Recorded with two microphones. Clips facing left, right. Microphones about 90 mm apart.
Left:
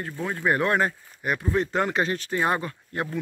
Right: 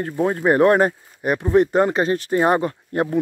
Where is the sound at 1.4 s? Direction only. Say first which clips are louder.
Right 10 dB; 25° right (ahead or behind).